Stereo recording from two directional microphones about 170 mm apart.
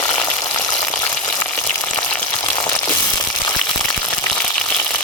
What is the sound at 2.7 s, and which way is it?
Crushing, 20° left (ahead or behind).